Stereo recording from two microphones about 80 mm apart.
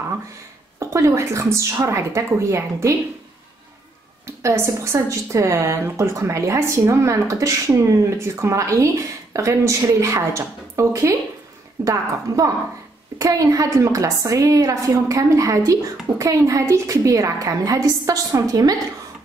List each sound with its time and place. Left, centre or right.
0.7 s speech: right
4.4 s a woman's voice: right